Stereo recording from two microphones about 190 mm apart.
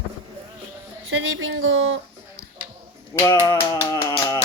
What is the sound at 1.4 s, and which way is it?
Speech, 90° right.